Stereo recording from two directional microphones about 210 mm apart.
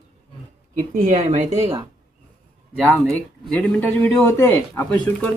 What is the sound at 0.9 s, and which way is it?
Speech, 35° right (ahead or behind).